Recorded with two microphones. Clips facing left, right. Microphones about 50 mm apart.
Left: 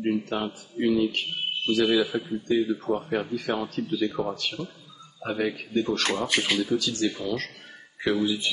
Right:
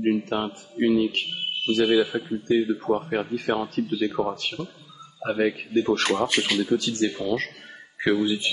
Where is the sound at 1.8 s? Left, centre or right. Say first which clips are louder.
Right 4 dB; centre.